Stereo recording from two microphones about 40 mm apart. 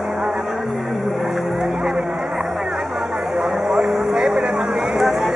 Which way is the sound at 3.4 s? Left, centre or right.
Centre.